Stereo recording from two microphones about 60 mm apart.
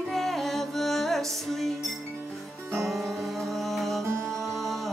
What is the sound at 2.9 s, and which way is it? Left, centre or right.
Music, centre.